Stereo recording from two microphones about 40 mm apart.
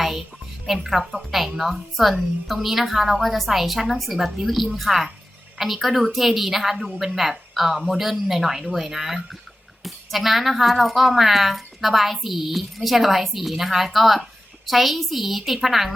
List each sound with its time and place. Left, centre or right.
0.9 s speech: centre